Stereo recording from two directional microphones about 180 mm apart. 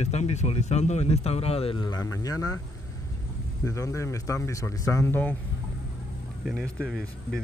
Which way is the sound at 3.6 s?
15° left (ahead or behind).